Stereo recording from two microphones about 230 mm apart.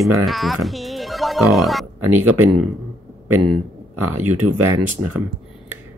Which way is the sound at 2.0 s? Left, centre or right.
Right.